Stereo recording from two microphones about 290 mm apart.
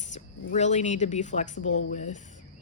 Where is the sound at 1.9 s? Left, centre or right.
Left.